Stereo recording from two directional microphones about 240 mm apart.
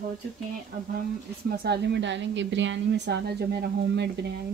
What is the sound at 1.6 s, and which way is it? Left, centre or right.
A woman's voice, right.